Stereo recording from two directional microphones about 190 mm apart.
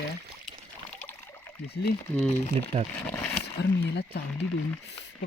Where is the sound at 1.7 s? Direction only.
55° left (ahead or behind).